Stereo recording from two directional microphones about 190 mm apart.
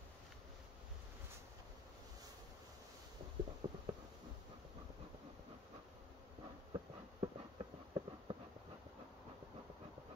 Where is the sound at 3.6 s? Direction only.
25° right (ahead or behind).